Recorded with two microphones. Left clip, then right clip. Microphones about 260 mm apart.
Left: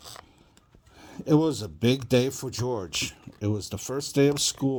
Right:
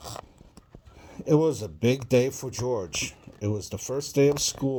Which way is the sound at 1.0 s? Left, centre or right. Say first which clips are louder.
Right 1 dB; left.